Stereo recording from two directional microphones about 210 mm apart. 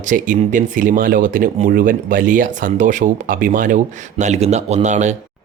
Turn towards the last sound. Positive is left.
turn(degrees=-35)  # may be behind; listen again after turning